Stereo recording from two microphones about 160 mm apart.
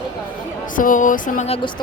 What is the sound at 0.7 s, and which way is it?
Music, 55° left (ahead or behind).